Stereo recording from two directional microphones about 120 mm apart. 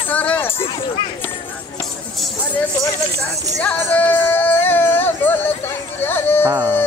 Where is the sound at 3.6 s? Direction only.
15° left (ahead or behind).